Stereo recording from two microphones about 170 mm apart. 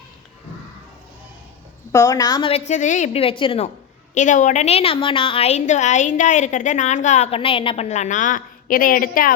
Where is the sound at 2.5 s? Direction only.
40° left (ahead or behind).